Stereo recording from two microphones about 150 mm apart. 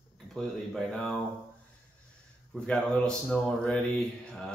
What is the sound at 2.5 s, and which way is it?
Speech, 5° left (ahead or behind).